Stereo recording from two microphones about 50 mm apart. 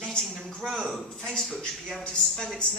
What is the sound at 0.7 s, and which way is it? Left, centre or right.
Speech, centre.